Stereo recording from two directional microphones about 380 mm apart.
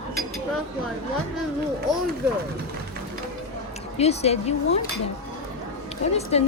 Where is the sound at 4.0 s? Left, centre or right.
Centre.